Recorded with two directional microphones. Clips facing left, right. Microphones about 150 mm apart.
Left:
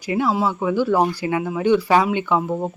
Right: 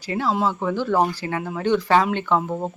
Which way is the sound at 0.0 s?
10° left (ahead or behind).